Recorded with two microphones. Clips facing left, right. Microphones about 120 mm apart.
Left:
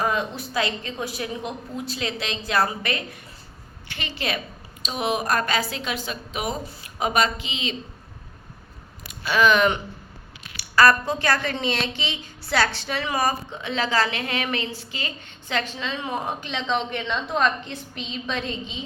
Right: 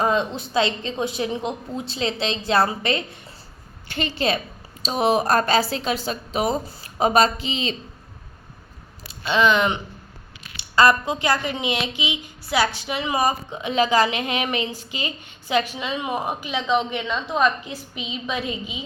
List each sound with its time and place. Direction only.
0.0 s a woman's voice: 25° right (ahead or behind)
9.0 s a woman's voice: 25° right (ahead or behind); by 18.8 s 10° right (ahead or behind)